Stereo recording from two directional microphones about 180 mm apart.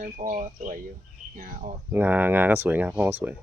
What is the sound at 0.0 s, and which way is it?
Speech, 50° right (ahead or behind).